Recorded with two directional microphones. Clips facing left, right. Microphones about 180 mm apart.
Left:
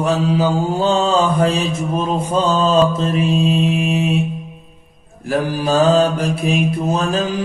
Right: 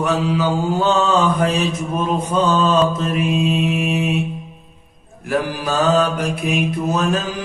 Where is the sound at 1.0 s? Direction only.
30° left (ahead or behind).